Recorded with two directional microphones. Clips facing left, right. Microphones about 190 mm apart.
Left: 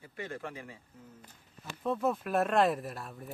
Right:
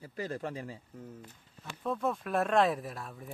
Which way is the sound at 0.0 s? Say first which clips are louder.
Right 4 dB; 35° right (ahead or behind).